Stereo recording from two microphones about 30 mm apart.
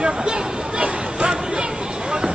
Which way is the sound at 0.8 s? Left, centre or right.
Right.